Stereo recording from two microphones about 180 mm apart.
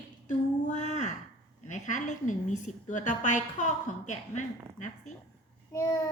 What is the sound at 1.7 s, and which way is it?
A woman's voice, 45° left (ahead or behind).